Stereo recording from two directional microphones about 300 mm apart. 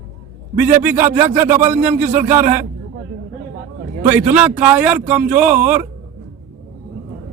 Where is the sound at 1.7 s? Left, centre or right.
Right.